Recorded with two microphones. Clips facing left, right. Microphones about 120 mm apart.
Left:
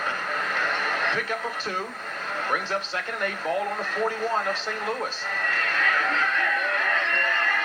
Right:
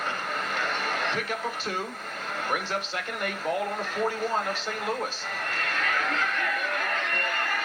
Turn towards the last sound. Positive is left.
turn(degrees=30)  # may be behind; listen again after turning